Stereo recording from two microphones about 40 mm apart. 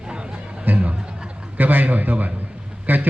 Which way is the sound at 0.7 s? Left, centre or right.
Right.